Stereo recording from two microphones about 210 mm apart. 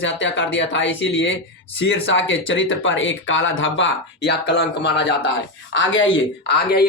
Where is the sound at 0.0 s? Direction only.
60° left (ahead or behind).